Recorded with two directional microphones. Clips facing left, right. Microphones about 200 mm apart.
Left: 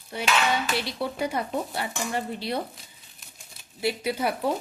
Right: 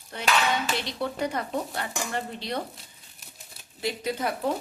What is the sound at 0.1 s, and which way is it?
Speech, 10° left (ahead or behind).